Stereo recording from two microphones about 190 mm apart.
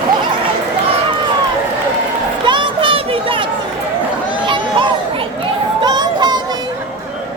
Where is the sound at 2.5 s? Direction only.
25° right (ahead or behind).